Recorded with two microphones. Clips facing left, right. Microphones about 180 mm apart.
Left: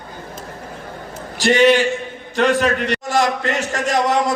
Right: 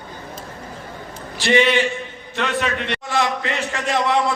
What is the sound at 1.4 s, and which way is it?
A man's voice, 45° left (ahead or behind).